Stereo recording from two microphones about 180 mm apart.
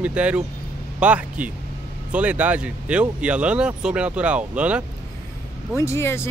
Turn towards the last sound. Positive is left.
turn(degrees=15)  # may be behind; listen again after turning